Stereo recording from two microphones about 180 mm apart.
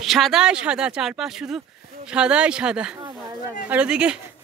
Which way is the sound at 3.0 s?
25° right (ahead or behind).